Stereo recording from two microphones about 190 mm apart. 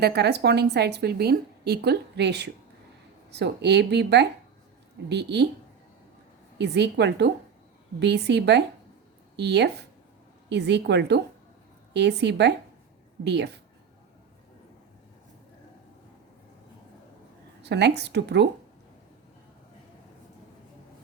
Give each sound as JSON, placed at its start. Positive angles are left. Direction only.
{"t": 0.0, "sound": "a woman's voice", "side_deg": -60}
{"t": 6.6, "sound": "a woman's voice", "side_deg": -65}
{"t": 17.6, "sound": "a woman's voice", "side_deg": -65}